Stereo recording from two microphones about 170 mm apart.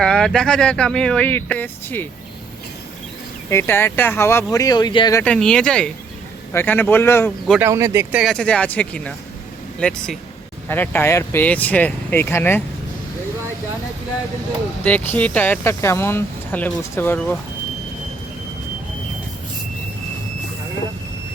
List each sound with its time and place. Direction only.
0.0 s speech: 5° left (ahead or behind)
3.5 s speech: 15° left (ahead or behind)
5.2 s speech: 5° left (ahead or behind)
7.6 s speech: 15° right (ahead or behind)
8.2 s speech: 5° left (ahead or behind)
14.8 s speech: 10° left (ahead or behind)